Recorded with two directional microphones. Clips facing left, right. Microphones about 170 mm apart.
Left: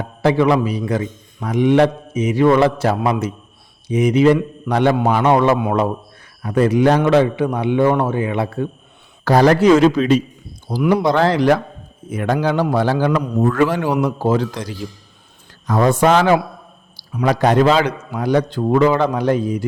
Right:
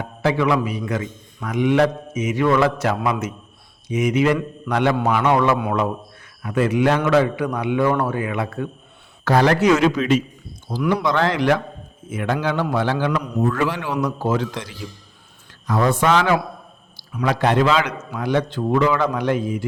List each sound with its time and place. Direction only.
0.0 s a man's voice: 35° left (ahead or behind)
6.4 s a man's voice: 35° left (ahead or behind)